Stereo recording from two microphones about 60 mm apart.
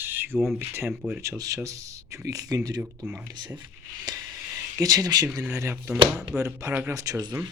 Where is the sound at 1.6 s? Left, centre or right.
Right.